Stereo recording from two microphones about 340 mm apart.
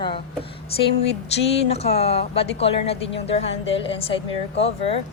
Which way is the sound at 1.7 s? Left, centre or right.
Centre.